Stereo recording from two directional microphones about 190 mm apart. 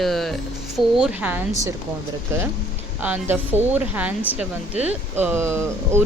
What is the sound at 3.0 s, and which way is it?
Speech, 10° right (ahead or behind).